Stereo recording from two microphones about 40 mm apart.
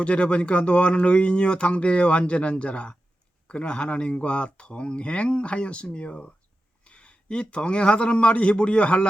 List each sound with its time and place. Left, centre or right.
0.0 s a man's voice: left